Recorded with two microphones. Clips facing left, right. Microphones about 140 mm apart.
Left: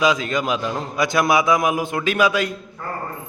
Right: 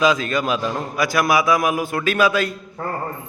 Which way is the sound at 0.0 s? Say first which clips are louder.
Right 1 dB; 15° left (ahead or behind).